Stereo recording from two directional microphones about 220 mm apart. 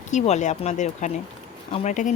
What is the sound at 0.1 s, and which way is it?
Speech, 30° left (ahead or behind).